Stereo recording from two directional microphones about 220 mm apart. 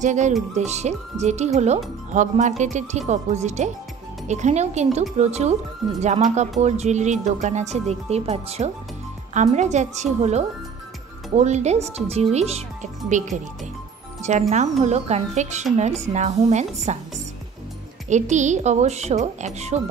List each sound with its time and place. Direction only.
0.0 s speech: 35° right (ahead or behind)
14.5 s speech: 30° right (ahead or behind)
18.1 s speech: 35° right (ahead or behind)